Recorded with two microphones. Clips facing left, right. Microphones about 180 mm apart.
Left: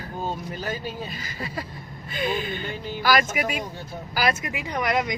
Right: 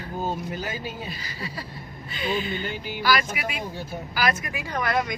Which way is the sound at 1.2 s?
45° left (ahead or behind).